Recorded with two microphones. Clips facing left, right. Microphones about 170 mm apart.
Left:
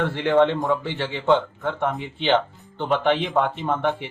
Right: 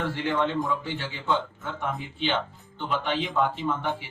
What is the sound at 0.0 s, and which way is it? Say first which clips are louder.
Speech: left 8 dB; 60° left (ahead or behind).